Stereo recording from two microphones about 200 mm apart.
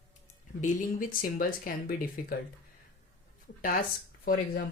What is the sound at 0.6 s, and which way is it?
Speech, 40° left (ahead or behind).